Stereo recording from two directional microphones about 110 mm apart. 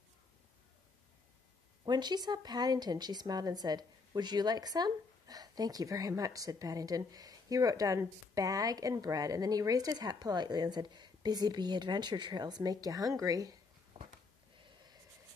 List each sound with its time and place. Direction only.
1.9 s a woman's voice: 40° right (ahead or behind)